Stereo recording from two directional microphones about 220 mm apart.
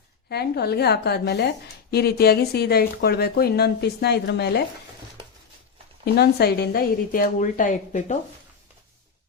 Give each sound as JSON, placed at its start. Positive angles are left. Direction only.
{"t": 0.3, "sound": "speech", "side_deg": 45}
{"t": 6.1, "sound": "a woman's voice", "side_deg": 45}